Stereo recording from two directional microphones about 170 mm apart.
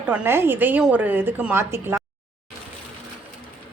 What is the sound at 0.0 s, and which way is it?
Speech, 10° right (ahead or behind).